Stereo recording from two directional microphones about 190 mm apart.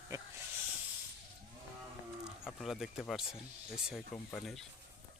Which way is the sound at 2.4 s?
Centre (ahead or behind).